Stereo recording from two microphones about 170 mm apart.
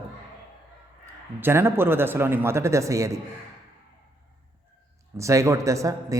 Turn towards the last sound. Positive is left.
turn(degrees=-20)  # may be behind; listen again after turning